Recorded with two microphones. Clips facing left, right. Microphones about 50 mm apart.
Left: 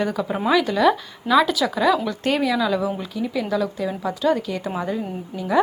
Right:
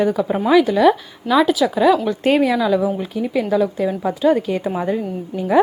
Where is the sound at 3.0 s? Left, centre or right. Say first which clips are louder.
Right 5 dB; right.